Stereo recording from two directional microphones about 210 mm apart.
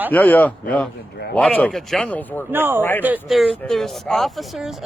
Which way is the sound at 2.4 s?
10° right (ahead or behind).